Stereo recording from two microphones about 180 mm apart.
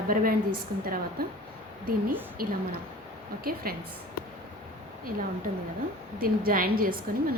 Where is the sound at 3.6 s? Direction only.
55° right (ahead or behind).